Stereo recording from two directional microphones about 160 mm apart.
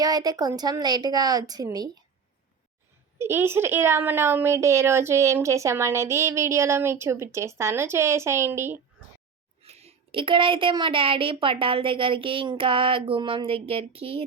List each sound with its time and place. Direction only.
0.0 s a woman's voice: 25° right (ahead or behind)
3.2 s a woman's voice: 15° right (ahead or behind)
9.6 s speech: 40° right (ahead or behind)